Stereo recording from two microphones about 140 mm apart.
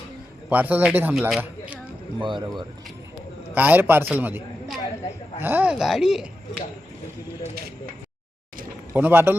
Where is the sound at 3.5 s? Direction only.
10° right (ahead or behind).